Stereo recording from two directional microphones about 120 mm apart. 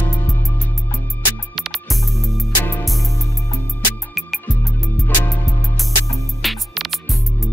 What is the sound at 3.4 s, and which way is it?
Music, 25° left (ahead or behind).